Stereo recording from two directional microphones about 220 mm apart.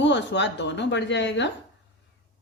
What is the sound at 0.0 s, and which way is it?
Speech, 55° left (ahead or behind).